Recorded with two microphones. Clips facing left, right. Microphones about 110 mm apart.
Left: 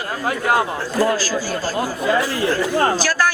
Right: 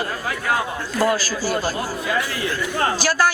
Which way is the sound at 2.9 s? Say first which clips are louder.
Even; 15° right (ahead or behind).